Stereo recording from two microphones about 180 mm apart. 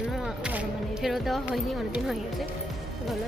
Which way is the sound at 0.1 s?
5° right (ahead or behind).